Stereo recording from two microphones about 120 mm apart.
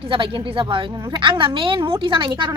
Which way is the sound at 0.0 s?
45° right (ahead or behind).